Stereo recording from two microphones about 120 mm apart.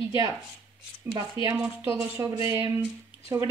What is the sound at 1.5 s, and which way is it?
Speech, 10° right (ahead or behind).